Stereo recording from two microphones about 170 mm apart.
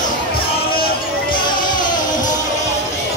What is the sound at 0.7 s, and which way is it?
Music, 60° left (ahead or behind).